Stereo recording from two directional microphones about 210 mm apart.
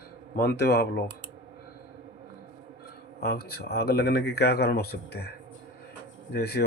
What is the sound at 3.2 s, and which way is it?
Speech, 50° left (ahead or behind).